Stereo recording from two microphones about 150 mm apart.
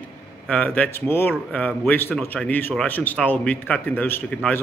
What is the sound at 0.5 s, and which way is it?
Speech, 10° left (ahead or behind).